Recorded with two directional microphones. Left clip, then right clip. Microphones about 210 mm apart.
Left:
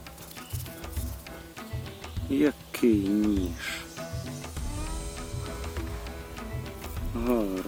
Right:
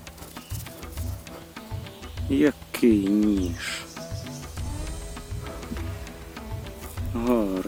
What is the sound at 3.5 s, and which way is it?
Music, 25° right (ahead or behind).